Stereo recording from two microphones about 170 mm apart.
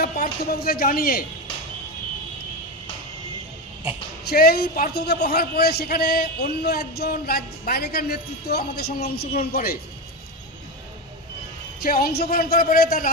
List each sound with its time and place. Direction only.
0.0 s a man's voice: 60° left (ahead or behind)
4.3 s a man's voice: 65° left (ahead or behind)
11.8 s a man's voice: 60° left (ahead or behind)